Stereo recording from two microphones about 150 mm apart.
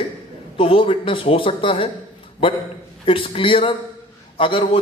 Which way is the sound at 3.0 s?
35° left (ahead or behind).